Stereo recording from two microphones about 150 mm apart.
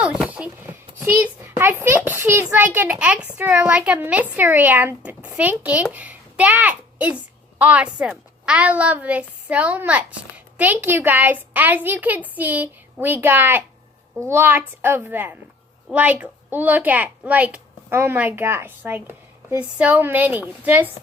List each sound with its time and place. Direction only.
0.0 s a child's voice: 5° right (ahead or behind)